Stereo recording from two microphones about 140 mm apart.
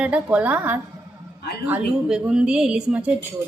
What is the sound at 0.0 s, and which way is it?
A woman's voice, 10° right (ahead or behind).